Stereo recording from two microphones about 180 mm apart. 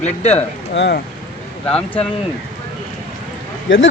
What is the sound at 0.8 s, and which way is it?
Speech, 70° left (ahead or behind).